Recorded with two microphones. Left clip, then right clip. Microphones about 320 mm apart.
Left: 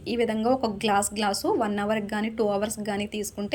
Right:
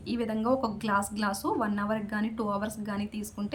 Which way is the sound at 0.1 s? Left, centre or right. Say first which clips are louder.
Left 5 dB; centre.